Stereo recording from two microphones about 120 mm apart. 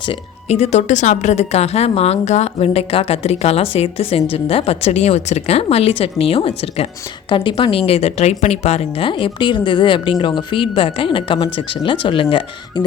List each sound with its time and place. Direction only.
0.4 s a woman's voice: 65° left (ahead or behind); by 12.8 s 45° left (ahead or behind)